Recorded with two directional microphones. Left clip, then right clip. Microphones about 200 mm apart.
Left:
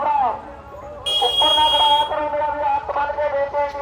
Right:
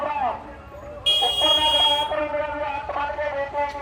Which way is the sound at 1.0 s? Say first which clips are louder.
Left 2 dB; 50° left (ahead or behind).